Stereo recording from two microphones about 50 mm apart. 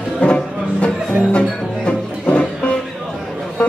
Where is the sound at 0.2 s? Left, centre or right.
Left.